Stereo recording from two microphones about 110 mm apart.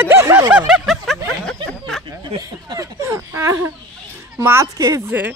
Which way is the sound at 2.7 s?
25° right (ahead or behind).